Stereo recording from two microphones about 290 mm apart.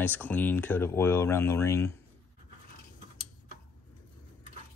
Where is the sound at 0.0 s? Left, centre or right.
Centre.